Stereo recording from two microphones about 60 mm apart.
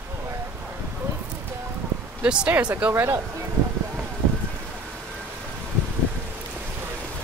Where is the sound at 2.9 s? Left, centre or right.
Right.